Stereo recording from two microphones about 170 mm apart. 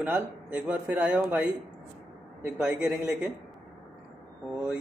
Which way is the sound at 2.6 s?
5° right (ahead or behind).